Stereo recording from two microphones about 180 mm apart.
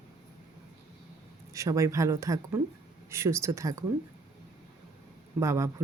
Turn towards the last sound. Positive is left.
turn(degrees=-15)  # may be behind; listen again after turning